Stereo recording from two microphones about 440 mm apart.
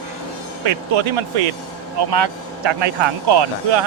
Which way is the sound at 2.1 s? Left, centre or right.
Right.